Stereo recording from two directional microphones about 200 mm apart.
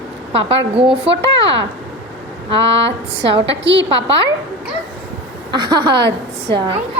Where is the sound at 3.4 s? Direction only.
65° right (ahead or behind).